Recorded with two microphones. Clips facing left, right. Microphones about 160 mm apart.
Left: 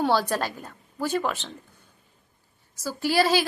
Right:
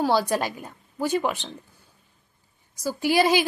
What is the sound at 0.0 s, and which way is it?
A woman's voice, 10° right (ahead or behind).